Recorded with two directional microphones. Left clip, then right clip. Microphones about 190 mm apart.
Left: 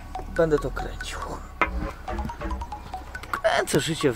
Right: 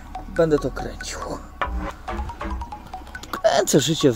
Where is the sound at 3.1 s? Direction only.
60° right (ahead or behind).